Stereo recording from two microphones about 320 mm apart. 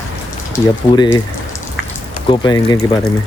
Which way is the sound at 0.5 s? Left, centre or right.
Centre.